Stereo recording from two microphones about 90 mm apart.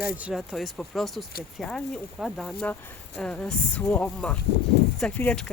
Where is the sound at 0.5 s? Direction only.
Centre (ahead or behind).